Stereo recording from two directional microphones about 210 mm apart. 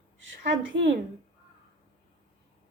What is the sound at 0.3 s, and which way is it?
Speech, 65° right (ahead or behind).